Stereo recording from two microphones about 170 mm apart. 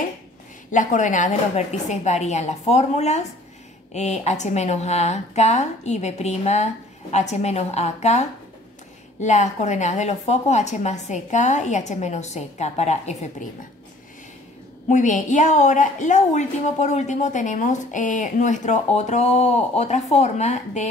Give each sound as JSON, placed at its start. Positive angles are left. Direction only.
{"t": 0.7, "sound": "a woman's voice", "side_deg": 50}
{"t": 14.9, "sound": "a woman's voice", "side_deg": 45}